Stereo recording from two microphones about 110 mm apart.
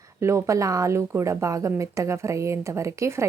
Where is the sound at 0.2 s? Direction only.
30° right (ahead or behind).